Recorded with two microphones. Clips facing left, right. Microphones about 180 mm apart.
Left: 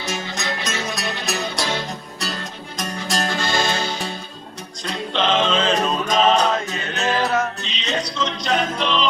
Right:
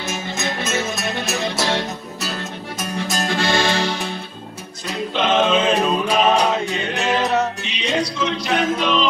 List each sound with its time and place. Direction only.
0.3 s music: 5° right (ahead or behind)
2.8 s music: centre (ahead or behind)
3.4 s music: 65° right (ahead or behind)
4.8 s music: 5° right (ahead or behind)